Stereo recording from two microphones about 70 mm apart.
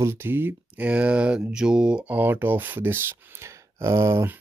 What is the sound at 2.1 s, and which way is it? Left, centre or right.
Speech, right.